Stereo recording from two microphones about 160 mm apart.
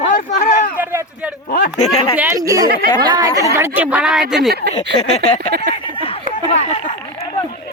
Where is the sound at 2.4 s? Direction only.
20° right (ahead or behind); by 4.2 s 5° right (ahead or behind).